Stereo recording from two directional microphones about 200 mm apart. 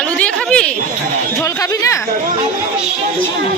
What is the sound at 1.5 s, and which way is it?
Chatter, 15° left (ahead or behind).